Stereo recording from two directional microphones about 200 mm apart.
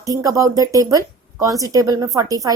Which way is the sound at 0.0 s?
15° right (ahead or behind).